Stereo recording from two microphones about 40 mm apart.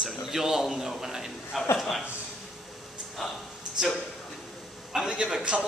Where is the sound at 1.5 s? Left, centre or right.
Centre.